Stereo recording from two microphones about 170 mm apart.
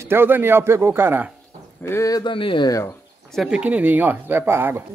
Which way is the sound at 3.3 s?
Centre (ahead or behind).